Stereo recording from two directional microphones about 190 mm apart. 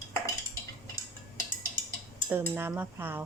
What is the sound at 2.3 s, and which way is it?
Speech, 10° right (ahead or behind).